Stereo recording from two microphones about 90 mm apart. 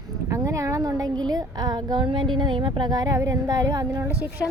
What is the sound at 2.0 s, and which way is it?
Speech, 65° right (ahead or behind).